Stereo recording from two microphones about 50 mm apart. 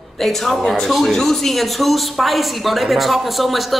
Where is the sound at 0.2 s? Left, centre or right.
Centre.